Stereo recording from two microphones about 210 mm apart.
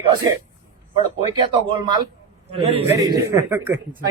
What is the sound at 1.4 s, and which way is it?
Speech, 20° right (ahead or behind).